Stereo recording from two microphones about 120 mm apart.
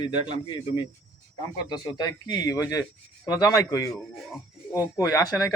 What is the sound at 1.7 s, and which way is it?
Speech, 35° left (ahead or behind).